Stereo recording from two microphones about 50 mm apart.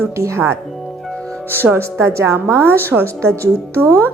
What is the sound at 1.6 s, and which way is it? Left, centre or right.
Speech, right.